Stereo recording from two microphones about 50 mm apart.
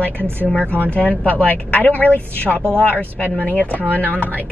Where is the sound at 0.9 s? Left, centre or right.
Left.